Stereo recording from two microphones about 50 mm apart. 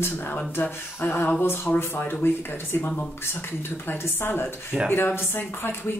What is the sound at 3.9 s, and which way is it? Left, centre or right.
Speech, left.